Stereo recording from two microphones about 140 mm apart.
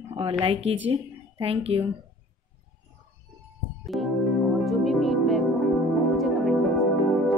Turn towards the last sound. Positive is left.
turn(degrees=0)  # may be behind; listen again after turning